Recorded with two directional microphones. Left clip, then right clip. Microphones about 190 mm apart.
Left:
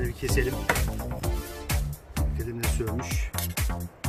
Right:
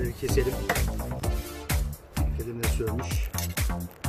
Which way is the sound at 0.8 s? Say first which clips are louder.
Even; centre (ahead or behind).